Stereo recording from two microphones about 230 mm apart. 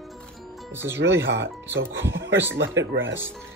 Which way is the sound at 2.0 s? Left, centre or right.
Right.